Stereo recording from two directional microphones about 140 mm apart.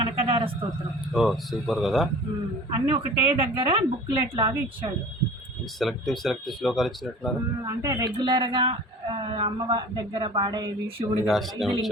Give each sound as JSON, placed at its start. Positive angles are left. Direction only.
{"t": 0.0, "sound": "a sound", "side_deg": -40}
{"t": 1.1, "sound": "speech", "side_deg": 0}
{"t": 2.6, "sound": "speech", "side_deg": -30}
{"t": 5.8, "sound": "speech", "side_deg": 0}
{"t": 7.6, "sound": "speech", "side_deg": -25}
{"t": 11.3, "sound": "speech", "side_deg": 0}